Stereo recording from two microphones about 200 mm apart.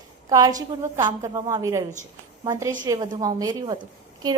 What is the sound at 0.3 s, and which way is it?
A woman's voice, 20° right (ahead or behind).